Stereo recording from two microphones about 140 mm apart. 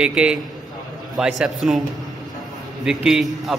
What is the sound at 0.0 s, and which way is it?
A man's voice, 5° right (ahead or behind).